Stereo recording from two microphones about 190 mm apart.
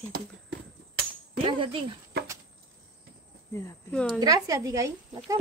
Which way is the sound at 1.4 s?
25° right (ahead or behind).